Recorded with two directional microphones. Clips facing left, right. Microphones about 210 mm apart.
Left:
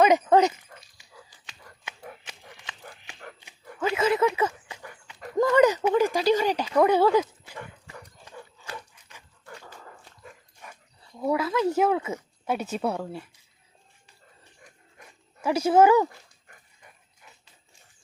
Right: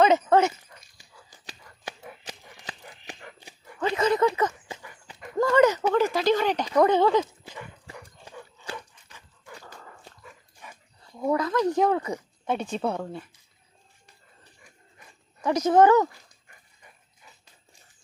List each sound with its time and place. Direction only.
0.0 s speech: 15° left (ahead or behind)
1.3 s a sound: 35° right (ahead or behind)
3.8 s speech: 5° left (ahead or behind)
5.4 s speech: 15° left (ahead or behind)
11.2 s speech: 5° left (ahead or behind)
15.4 s speech: 10° left (ahead or behind)